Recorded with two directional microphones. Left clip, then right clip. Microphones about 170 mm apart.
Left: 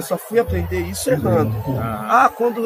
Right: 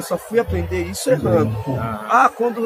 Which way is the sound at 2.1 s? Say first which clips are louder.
Even; 10° left (ahead or behind).